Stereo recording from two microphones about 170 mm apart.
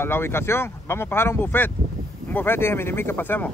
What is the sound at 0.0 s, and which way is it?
Speech, 15° left (ahead or behind).